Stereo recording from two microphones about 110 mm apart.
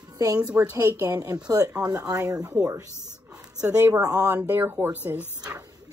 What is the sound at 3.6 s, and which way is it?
A woman's voice, 25° right (ahead or behind).